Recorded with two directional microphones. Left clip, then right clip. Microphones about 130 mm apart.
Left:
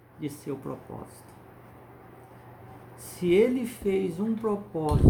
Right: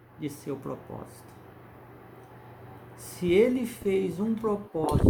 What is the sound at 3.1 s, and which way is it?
Speech, 5° left (ahead or behind).